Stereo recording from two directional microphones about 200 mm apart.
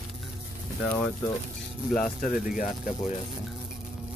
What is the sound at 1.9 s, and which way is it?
Speech, centre (ahead or behind).